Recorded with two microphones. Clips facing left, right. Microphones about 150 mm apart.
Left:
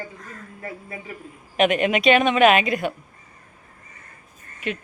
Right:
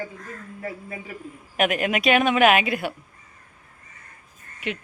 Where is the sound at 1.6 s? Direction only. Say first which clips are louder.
Left 3 dB; centre (ahead or behind).